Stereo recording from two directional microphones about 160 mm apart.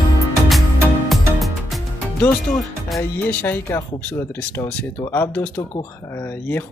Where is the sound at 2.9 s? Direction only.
10° left (ahead or behind).